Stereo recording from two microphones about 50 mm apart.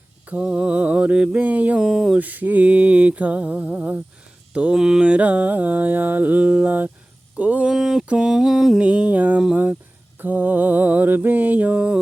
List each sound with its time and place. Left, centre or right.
0.3 s mantra: right
1.8 s a sound: centre
2.1 s mantra: right
4.5 s mantra: centre
4.8 s a sound: centre
5.0 s mantra: right
7.3 s a sound: right
7.7 s mantra: centre
8.8 s mantra: right
10.2 s mantra: right